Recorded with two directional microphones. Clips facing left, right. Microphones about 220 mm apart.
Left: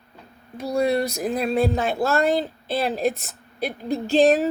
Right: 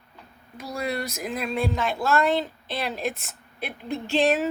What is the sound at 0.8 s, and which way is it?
Speech, 35° left (ahead or behind).